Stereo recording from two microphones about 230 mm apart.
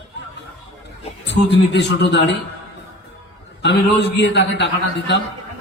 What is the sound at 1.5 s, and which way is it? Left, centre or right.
Speech, left.